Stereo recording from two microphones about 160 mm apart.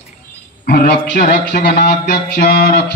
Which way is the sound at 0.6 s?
65° left (ahead or behind).